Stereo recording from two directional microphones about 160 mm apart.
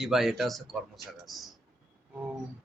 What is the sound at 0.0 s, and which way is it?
Speech, centre (ahead or behind).